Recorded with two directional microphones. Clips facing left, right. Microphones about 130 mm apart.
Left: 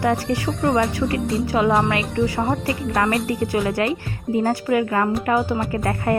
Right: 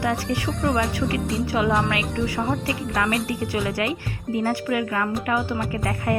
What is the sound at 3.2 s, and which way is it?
A woman's voice, 45° left (ahead or behind).